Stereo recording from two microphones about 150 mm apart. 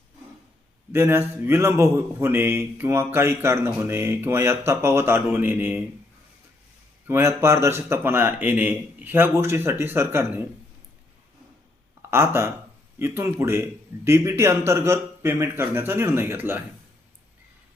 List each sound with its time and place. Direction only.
0.9 s speech: 15° right (ahead or behind)
7.1 s speech: 20° right (ahead or behind)
12.1 s speech: 15° right (ahead or behind)